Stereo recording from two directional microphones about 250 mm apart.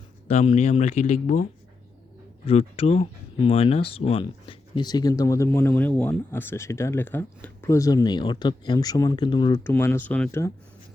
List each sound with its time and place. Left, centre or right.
0.3 s speech: left
2.5 s speech: left; by 10.5 s centre